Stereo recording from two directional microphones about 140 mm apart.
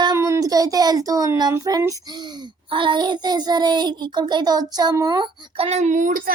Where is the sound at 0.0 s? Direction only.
25° right (ahead or behind).